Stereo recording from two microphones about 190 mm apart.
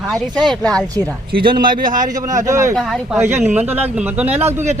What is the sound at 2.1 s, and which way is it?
Speech, 20° right (ahead or behind).